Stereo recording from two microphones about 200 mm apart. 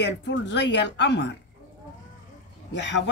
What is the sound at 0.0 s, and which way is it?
Speech, 60° left (ahead or behind).